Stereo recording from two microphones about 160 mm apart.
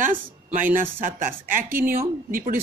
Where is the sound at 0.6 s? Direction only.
55° right (ahead or behind).